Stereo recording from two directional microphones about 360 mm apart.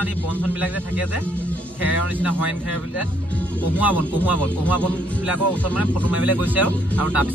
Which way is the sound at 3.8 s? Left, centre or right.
Centre.